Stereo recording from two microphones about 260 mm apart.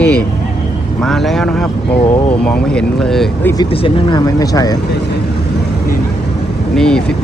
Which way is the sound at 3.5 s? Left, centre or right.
Centre.